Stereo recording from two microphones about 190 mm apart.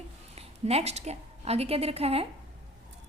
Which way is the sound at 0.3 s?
35° right (ahead or behind).